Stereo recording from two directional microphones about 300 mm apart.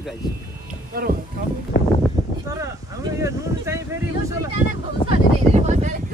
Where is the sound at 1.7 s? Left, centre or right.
Left.